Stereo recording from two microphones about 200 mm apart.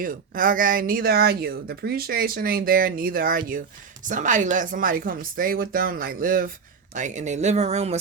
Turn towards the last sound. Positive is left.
turn(degrees=-30)  # may be behind; listen again after turning